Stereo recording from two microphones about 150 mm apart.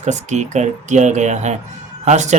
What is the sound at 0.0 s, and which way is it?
Speech, 50° right (ahead or behind).